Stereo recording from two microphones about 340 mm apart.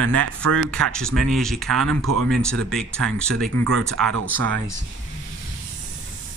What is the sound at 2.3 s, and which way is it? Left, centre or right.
Speech, centre.